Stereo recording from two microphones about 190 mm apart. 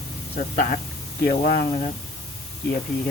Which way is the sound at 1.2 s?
45° left (ahead or behind).